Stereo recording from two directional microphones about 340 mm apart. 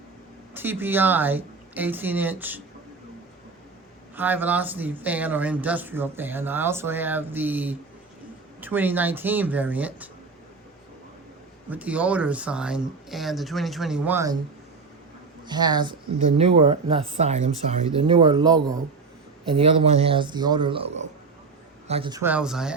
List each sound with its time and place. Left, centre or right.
0.5 s speech: centre
4.1 s speech: centre
11.7 s speech: centre
15.4 s speech: centre